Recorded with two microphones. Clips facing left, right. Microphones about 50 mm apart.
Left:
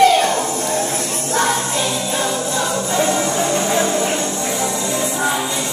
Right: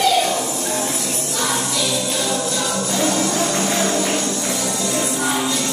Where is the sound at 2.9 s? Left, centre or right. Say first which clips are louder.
Left 2 dB; left.